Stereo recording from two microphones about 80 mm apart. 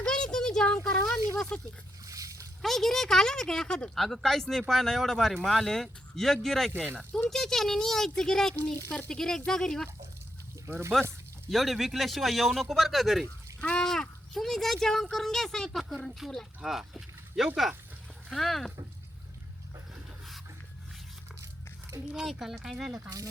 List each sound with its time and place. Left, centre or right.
0.0 s a sound: centre
2.0 s splash: right
2.6 s speech: centre
10.7 s speech: right
11.5 s speech: centre
13.6 s speech: centre
22.0 s speech: centre